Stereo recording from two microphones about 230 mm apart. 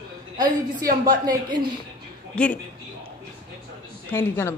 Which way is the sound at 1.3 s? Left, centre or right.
Centre.